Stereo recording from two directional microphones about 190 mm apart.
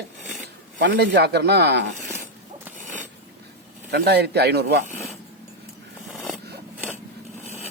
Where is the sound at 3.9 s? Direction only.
60° right (ahead or behind).